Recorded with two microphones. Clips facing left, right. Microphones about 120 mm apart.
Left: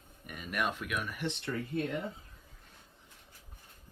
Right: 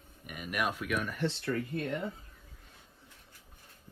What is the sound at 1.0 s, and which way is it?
Speech, 10° left (ahead or behind).